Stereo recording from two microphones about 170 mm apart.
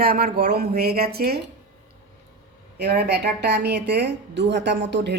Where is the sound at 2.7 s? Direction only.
70° right (ahead or behind).